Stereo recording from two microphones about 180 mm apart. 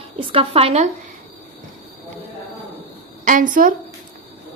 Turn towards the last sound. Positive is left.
turn(degrees=-50)  # may be behind; listen again after turning